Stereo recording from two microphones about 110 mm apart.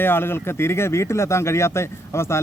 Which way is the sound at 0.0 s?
20° left (ahead or behind).